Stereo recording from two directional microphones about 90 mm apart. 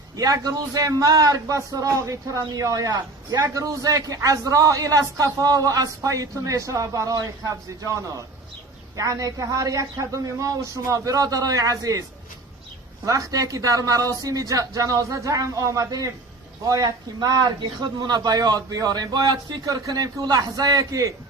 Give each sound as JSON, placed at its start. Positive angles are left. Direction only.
{"t": 0.2, "sound": "a man's voice", "side_deg": -45}
{"t": 13.1, "sound": "a man's voice", "side_deg": -40}
{"t": 16.6, "sound": "speech", "side_deg": -50}